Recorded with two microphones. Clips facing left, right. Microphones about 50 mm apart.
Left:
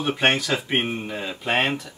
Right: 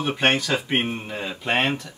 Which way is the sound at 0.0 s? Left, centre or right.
Centre.